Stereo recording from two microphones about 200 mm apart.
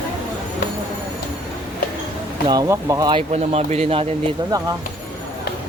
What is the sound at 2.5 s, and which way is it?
Speech, 15° right (ahead or behind).